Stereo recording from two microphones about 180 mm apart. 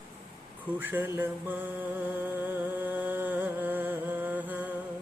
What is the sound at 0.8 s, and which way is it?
Music, 10° right (ahead or behind).